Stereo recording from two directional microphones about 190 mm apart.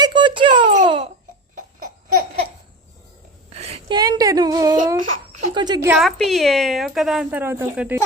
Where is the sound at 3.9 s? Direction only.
20° right (ahead or behind).